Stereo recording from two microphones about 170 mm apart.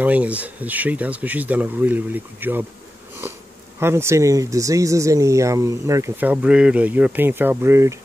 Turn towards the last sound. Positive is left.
turn(degrees=-15)  # may be behind; listen again after turning